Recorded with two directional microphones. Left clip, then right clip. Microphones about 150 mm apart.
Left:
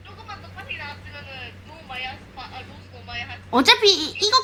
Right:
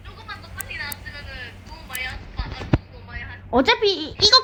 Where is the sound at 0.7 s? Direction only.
35° left (ahead or behind).